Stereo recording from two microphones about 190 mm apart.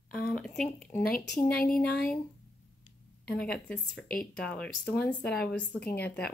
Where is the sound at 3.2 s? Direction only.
5° left (ahead or behind).